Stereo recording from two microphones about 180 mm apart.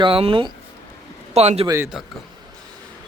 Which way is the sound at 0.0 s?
30° right (ahead or behind).